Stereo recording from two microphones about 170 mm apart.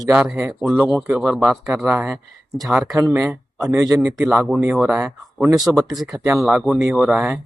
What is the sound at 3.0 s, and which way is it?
Speech, 15° right (ahead or behind).